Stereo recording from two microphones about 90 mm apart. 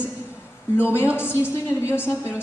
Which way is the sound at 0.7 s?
25° left (ahead or behind).